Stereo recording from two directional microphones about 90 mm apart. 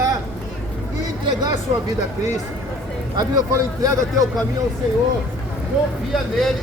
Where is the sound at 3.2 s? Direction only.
40° right (ahead or behind).